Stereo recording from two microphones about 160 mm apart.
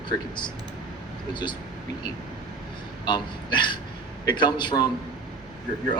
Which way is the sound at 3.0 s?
30° left (ahead or behind).